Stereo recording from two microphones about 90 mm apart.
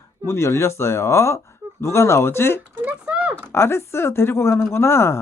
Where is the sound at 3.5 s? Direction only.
30° left (ahead or behind).